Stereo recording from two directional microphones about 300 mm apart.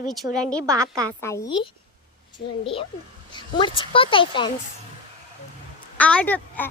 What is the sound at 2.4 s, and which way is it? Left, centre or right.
Speech, left.